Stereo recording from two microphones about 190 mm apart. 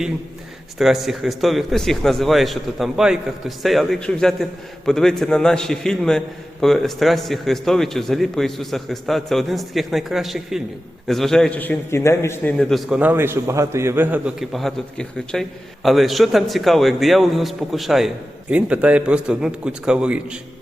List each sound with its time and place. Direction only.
0.8 s a man's voice: centre (ahead or behind)